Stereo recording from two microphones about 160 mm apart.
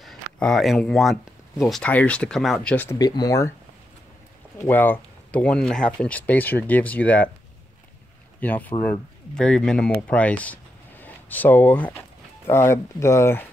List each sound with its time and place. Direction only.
0.0 s speech: centre (ahead or behind)
3.0 s speech: 25° left (ahead or behind)
4.6 s speech: 10° left (ahead or behind)
8.4 s speech: 10° left (ahead or behind)